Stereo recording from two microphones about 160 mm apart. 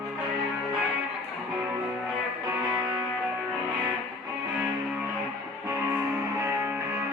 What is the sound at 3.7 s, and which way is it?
Music, 30° right (ahead or behind).